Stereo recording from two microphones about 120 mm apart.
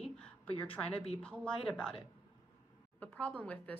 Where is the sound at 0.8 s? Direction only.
10° left (ahead or behind).